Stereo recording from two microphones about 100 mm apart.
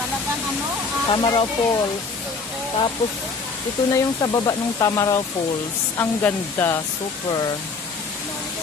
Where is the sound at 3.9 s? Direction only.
40° left (ahead or behind).